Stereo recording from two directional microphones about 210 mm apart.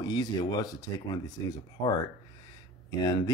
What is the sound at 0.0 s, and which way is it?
Speech, 20° left (ahead or behind).